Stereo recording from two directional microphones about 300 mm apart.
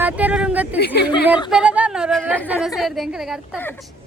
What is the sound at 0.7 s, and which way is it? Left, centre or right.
Speech, left.